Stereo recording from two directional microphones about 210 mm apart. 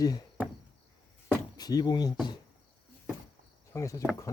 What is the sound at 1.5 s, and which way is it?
Speech, 20° left (ahead or behind).